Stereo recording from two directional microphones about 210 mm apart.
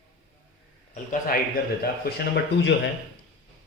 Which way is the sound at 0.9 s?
40° left (ahead or behind).